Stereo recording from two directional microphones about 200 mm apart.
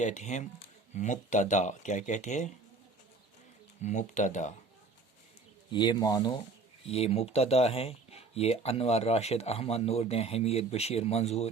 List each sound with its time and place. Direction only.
0.0 s speech: 35° left (ahead or behind)
3.8 s speech: 40° left (ahead or behind)
5.7 s speech: 20° left (ahead or behind)
6.8 s speech: 30° left (ahead or behind)